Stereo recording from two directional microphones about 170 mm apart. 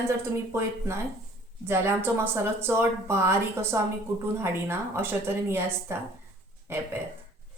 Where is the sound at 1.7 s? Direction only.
15° right (ahead or behind).